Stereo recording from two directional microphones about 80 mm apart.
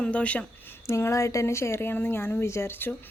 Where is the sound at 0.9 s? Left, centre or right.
Left.